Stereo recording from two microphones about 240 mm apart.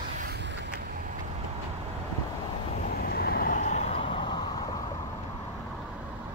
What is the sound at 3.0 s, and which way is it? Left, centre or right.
Vehicle, left.